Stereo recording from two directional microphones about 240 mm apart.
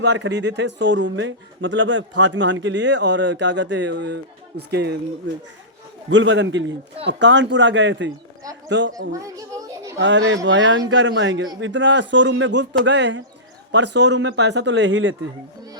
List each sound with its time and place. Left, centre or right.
0.0 s a man's voice: right
6.1 s a man's voice: right
9.1 s children playing: centre
10.0 s a man's voice: right